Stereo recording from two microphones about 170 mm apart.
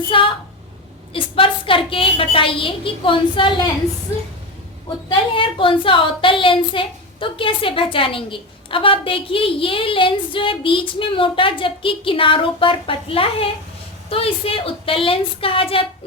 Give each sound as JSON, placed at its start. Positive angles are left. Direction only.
{"t": 0.1, "sound": "a woman's voice", "side_deg": 30}
{"t": 5.0, "sound": "a woman's voice", "side_deg": 30}